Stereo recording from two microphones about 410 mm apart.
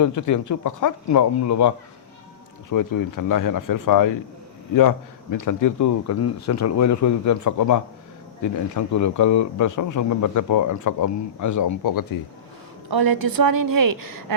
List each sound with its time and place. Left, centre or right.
0.0 s speech: left
12.9 s a woman's voice: right